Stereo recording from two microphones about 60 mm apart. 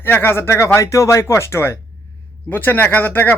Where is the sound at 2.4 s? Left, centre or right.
Left.